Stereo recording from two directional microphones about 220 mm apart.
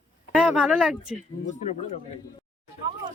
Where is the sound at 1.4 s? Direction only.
30° left (ahead or behind).